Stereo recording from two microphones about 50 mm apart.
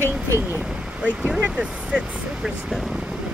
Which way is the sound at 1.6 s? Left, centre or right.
Centre.